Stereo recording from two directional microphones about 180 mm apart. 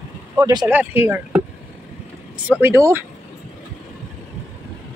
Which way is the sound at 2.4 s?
10° right (ahead or behind).